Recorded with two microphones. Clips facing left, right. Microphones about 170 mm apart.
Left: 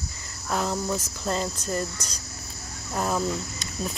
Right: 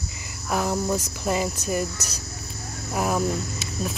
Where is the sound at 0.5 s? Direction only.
15° right (ahead or behind).